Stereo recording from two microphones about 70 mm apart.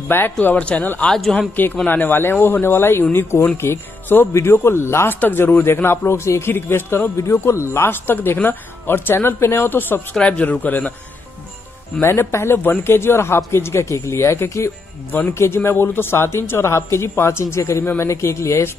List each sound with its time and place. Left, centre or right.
0.1 s speech: left
1.0 s a man's voice: centre
1.9 s speech: left
10.1 s speech: centre
12.0 s speech: left